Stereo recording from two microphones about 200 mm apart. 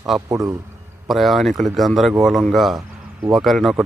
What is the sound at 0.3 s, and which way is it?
Speech, 15° right (ahead or behind).